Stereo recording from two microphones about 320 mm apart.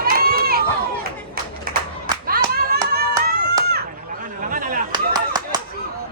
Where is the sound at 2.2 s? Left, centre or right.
Right.